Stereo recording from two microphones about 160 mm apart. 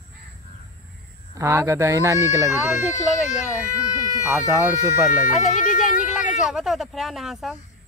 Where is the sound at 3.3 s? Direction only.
50° left (ahead or behind).